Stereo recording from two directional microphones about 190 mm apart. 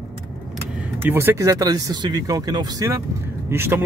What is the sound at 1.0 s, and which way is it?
A man's voice, 10° right (ahead or behind).